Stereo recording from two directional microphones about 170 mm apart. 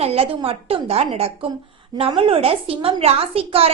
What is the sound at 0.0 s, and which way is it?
A woman's voice, 35° right (ahead or behind).